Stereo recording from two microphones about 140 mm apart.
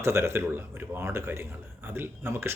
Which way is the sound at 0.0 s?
20° right (ahead or behind).